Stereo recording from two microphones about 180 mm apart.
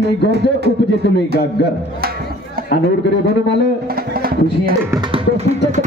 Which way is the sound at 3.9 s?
55° right (ahead or behind).